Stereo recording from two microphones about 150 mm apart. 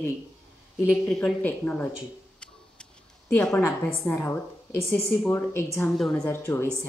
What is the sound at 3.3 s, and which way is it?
A woman's voice, 10° left (ahead or behind).